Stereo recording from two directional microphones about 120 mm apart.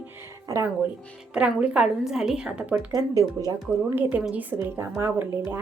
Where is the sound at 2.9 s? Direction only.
30° right (ahead or behind).